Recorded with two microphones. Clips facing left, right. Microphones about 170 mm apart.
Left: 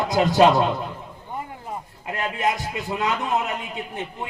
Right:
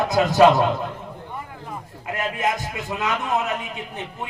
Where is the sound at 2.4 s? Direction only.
20° right (ahead or behind).